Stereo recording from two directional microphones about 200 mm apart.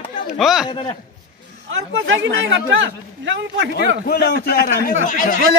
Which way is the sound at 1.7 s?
70° right (ahead or behind).